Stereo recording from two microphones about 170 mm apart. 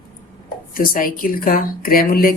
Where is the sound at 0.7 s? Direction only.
55° left (ahead or behind).